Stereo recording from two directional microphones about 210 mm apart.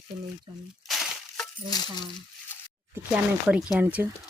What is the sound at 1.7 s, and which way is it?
Speech, 20° left (ahead or behind).